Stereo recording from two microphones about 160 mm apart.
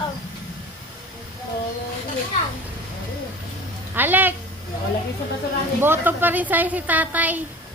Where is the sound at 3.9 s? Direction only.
10° right (ahead or behind).